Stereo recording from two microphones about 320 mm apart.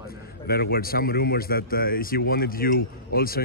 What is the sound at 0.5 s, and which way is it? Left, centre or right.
Speech, left.